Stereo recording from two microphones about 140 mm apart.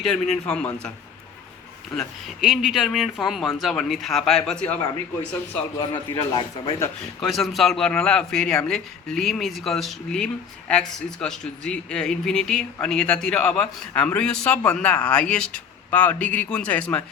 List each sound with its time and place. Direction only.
0.0 s speech: 5° left (ahead or behind)
2.0 s speech: centre (ahead or behind)
5.9 s a man's voice: 30° left (ahead or behind)
7.2 s speech: centre (ahead or behind)